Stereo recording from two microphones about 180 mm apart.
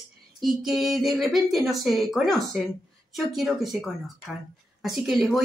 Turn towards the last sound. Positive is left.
turn(degrees=0)  # may be behind; listen again after turning